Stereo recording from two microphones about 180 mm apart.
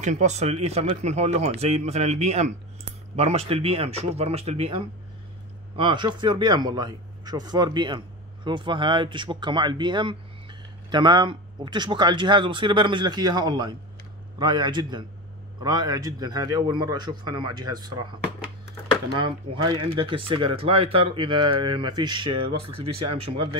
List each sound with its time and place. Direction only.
0.0 s speech: 40° right (ahead or behind); by 18.0 s 20° right (ahead or behind)
19.2 s speech: 25° right (ahead or behind)